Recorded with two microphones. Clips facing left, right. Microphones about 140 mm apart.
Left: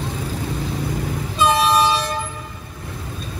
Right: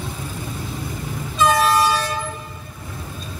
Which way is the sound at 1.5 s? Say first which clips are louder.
Left 1 dB; 20° left (ahead or behind).